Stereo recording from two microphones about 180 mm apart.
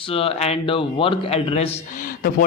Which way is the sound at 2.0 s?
50° left (ahead or behind).